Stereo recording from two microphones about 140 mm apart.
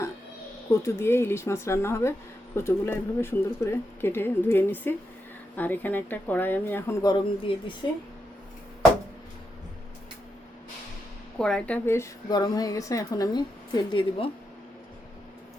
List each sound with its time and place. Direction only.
0.7 s a woman's voice: 20° left (ahead or behind)
7.0 s a woman's voice: 30° left (ahead or behind)
11.3 s speech: 5° left (ahead or behind)
12.3 s a woman's voice: 30° left (ahead or behind)